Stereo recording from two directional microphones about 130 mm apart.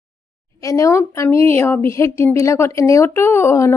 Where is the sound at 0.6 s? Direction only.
25° left (ahead or behind).